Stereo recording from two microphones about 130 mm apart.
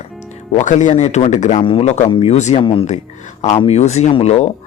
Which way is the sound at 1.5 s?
45° left (ahead or behind).